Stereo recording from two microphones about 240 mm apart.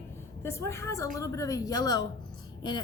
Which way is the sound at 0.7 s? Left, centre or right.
Centre.